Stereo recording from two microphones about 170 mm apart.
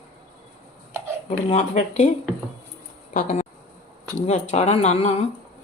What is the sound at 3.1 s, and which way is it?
A woman's voice, 45° left (ahead or behind).